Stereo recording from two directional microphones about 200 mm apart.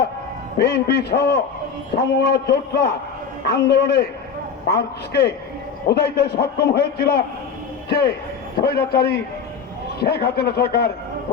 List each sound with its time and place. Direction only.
0.6 s a man's voice: 55° left (ahead or behind)